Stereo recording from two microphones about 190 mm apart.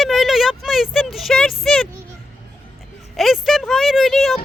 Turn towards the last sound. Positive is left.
turn(degrees=0)  # may be behind; listen again after turning